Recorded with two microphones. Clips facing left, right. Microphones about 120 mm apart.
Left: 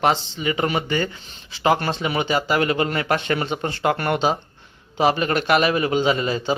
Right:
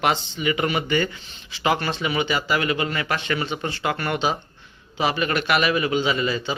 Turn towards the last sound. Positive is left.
turn(degrees=40)  # may be behind; listen again after turning